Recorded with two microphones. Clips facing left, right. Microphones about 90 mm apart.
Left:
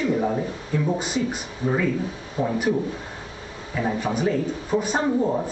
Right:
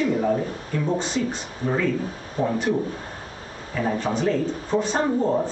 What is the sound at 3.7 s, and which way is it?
Speech, 10° left (ahead or behind).